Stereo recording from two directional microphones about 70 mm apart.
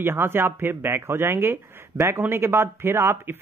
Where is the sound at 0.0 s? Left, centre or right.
Right.